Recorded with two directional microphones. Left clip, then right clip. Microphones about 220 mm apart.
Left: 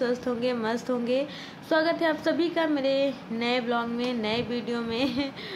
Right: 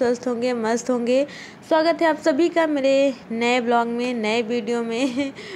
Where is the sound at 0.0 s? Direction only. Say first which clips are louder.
Right 6 dB; 25° right (ahead or behind).